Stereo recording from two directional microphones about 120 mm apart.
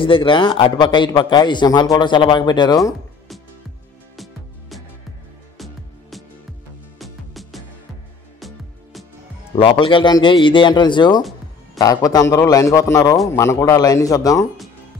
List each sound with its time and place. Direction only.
0.0 s a man's voice: 45° left (ahead or behind)
4.2 s music: centre (ahead or behind)
9.6 s a man's voice: 45° left (ahead or behind); by 14.5 s 30° left (ahead or behind)